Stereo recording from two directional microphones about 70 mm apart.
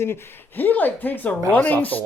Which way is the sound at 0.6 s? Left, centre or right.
Left.